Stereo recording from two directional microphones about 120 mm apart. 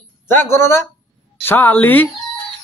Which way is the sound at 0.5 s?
20° left (ahead or behind).